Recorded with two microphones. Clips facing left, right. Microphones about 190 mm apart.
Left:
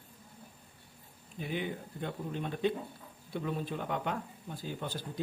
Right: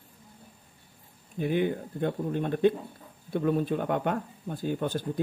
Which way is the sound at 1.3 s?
55° right (ahead or behind).